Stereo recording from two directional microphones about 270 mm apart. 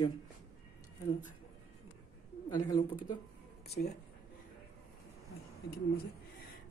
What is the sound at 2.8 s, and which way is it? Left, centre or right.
Speech, left.